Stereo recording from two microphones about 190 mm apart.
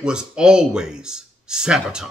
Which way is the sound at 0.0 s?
5° right (ahead or behind).